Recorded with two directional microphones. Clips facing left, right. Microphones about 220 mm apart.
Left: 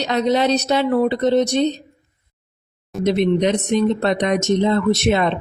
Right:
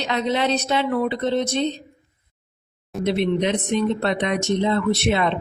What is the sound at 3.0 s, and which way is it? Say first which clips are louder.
Speech: left 4 dB; 40° left (ahead or behind).